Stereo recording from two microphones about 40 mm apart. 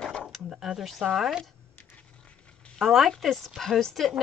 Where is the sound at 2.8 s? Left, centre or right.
Centre.